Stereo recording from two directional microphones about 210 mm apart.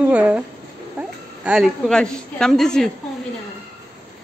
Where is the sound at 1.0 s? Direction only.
5° right (ahead or behind).